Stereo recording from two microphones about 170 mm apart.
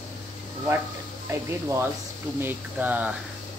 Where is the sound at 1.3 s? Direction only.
15° right (ahead or behind).